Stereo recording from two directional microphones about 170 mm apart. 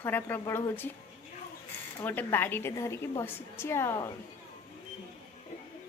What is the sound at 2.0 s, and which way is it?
A woman's voice, 10° left (ahead or behind).